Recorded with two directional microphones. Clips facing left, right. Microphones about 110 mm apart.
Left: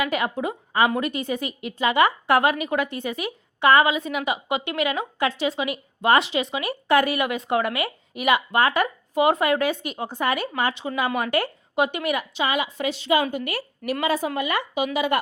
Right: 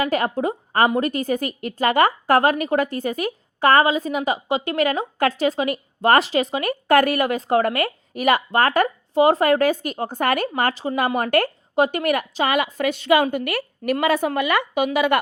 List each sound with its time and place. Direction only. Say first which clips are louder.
0.0 s a woman's voice: right 3 dB; 40° right (ahead or behind)
9.1 s a woman's voice: right 4 dB; 30° right (ahead or behind); by 15.2 s 65° right (ahead or behind)